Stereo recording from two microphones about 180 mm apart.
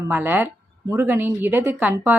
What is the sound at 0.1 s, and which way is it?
Speech, 10° right (ahead or behind).